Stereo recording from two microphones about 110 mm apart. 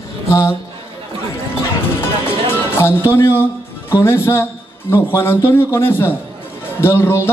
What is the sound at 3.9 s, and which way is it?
A man's voice, 20° left (ahead or behind).